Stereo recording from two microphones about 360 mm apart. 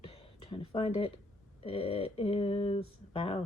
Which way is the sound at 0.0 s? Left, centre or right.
Centre.